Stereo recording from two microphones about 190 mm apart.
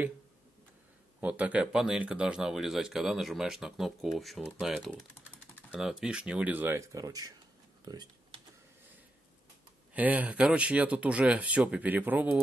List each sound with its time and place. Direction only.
1.2 s speech: 10° right (ahead or behind)
9.9 s speech: 10° right (ahead or behind)